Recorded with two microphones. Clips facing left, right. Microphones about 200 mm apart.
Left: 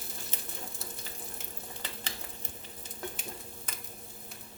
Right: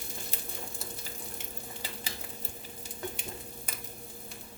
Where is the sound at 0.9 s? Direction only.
5° right (ahead or behind).